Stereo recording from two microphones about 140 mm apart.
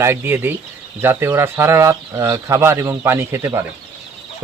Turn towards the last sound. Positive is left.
turn(degrees=-20)  # may be behind; listen again after turning